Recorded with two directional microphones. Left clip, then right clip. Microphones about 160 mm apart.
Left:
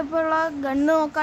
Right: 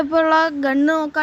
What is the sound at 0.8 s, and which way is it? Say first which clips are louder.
Speech: left 1 dB; 15° right (ahead or behind).